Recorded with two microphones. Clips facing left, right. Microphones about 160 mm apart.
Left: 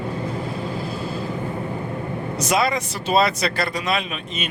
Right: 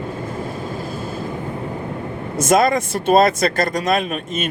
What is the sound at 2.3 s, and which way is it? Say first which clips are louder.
Speech: right 6 dB; 45° right (ahead or behind).